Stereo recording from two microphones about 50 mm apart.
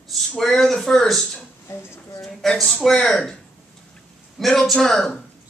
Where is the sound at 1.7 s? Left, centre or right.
Left.